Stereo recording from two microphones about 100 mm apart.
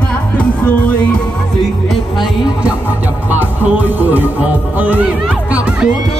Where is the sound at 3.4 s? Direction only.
20° right (ahead or behind).